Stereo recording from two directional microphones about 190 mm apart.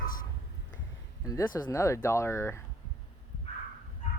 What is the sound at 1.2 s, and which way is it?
Speech, 15° left (ahead or behind).